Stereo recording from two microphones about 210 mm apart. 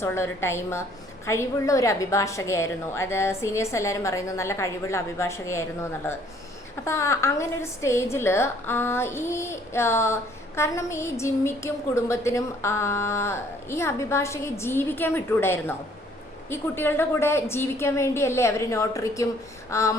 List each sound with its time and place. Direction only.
0.0 s a woman's voice: 10° left (ahead or behind)